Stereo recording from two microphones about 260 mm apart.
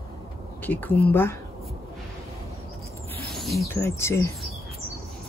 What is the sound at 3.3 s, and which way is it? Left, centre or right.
Speech, centre.